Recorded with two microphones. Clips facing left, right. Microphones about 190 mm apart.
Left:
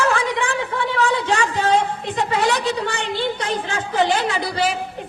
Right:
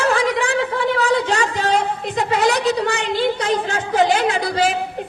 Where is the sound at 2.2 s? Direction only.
40° right (ahead or behind).